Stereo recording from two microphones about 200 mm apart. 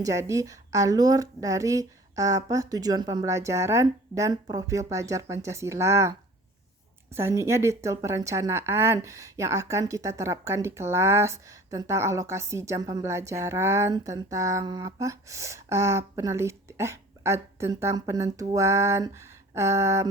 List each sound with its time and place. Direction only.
0.0 s a woman's voice: 15° right (ahead or behind)